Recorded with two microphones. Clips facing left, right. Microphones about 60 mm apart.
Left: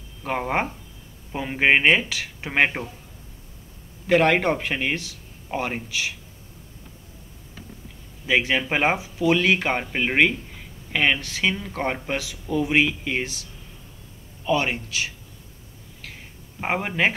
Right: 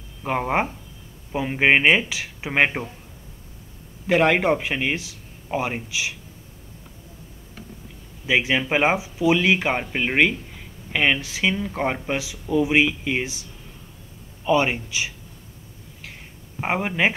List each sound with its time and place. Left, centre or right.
0.2 s speech: centre
4.1 s a man's voice: centre
8.3 s a man's voice: centre
16.5 s speech: centre